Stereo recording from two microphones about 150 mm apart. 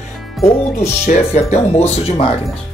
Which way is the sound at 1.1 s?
45° left (ahead or behind).